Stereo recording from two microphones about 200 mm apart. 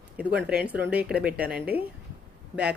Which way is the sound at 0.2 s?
5° right (ahead or behind).